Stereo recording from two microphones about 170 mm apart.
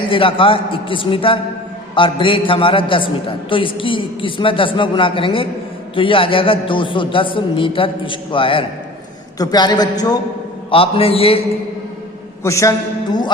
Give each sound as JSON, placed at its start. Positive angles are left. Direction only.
{"t": 0.1, "sound": "a man's voice", "side_deg": 30}
{"t": 12.4, "sound": "a man's voice", "side_deg": 15}